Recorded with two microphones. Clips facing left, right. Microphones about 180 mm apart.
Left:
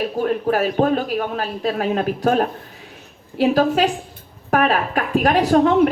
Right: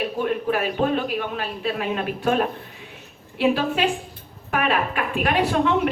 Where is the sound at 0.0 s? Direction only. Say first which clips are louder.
Left 3 dB; 40° left (ahead or behind).